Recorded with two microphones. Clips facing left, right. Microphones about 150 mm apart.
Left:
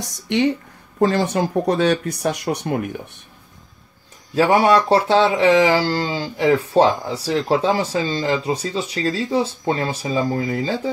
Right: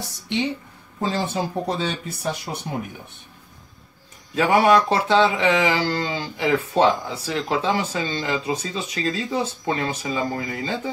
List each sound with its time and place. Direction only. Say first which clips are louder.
0.9 s speech: left 7 dB; 60° left (ahead or behind)
4.4 s speech: left 2 dB; 30° left (ahead or behind)